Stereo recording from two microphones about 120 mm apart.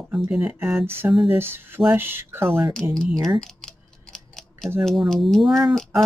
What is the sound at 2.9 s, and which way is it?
Speech, 5° left (ahead or behind).